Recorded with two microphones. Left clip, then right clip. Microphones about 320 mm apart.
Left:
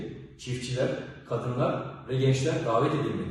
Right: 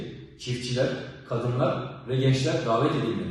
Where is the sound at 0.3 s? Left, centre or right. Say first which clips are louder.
Right 3 dB; centre.